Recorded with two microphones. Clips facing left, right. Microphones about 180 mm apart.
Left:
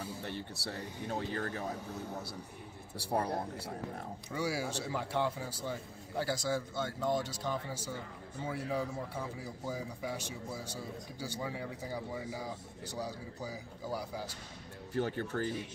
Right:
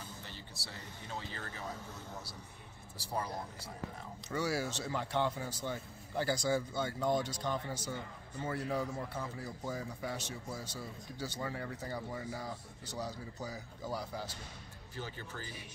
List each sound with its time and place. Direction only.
0.2 s speech: 60° left (ahead or behind)
3.0 s speech: 60° left (ahead or behind)
4.3 s a man's voice: 10° left (ahead or behind)
15.0 s speech: 65° left (ahead or behind)